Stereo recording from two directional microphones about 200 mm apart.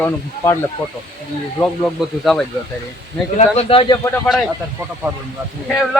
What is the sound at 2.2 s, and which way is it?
Speech, centre (ahead or behind).